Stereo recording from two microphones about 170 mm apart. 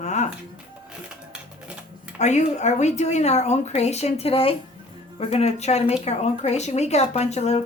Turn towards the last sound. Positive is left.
turn(degrees=40)  # may be behind; listen again after turning